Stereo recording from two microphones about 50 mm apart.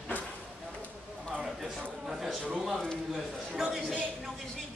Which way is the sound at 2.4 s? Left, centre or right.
Centre.